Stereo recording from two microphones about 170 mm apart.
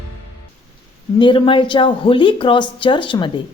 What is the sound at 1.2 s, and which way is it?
A woman's voice, 30° left (ahead or behind).